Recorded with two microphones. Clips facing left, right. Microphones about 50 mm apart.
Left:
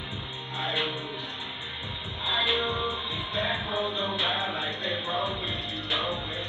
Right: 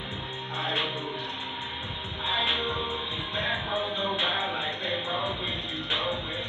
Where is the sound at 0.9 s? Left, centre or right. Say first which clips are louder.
Right 2 dB; right.